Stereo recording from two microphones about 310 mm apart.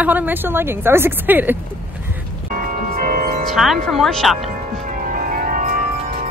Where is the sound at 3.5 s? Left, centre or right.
Centre.